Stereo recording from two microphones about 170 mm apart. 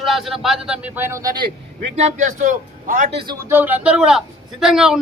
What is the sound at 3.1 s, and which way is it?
Speech, 30° right (ahead or behind).